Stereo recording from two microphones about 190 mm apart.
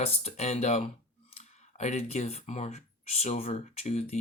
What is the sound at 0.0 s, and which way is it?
Speech, 35° left (ahead or behind).